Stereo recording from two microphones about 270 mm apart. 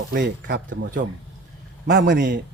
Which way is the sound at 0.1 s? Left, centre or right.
Right.